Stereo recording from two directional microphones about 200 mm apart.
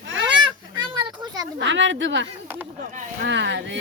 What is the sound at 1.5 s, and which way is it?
A woman's voice, 65° right (ahead or behind).